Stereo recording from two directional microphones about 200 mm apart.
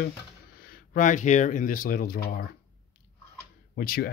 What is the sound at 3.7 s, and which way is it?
Speech, 50° left (ahead or behind).